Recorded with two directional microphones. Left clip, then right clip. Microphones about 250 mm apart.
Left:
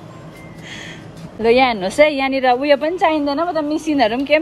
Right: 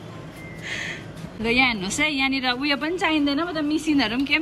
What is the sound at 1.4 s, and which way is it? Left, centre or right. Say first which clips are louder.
A woman's voice: left 7 dB; centre.